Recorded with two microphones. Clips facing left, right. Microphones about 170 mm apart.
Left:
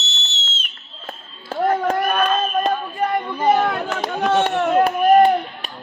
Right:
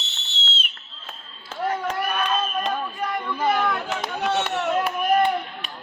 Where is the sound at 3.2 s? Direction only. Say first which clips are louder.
Left 4 dB; 20° left (ahead or behind).